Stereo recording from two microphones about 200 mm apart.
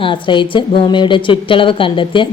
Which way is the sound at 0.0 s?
25° left (ahead or behind).